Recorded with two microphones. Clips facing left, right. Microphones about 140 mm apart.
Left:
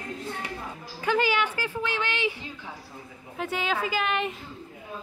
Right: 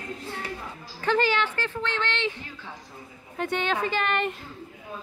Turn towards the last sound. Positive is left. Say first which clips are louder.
# right 1 dB
turn(degrees=0)  # may be behind; listen again after turning